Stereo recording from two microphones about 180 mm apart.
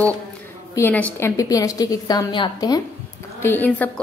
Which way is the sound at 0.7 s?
10° left (ahead or behind).